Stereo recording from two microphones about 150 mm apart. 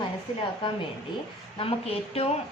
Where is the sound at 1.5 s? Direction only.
40° left (ahead or behind).